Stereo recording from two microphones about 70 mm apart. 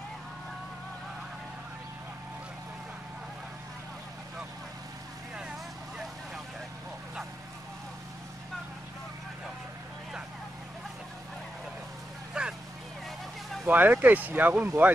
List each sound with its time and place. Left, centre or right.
12.4 s vehicle: centre
13.7 s speech: right